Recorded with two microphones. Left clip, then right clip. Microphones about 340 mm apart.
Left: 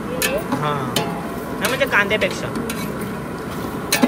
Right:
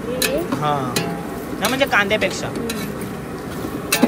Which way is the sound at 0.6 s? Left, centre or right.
Centre.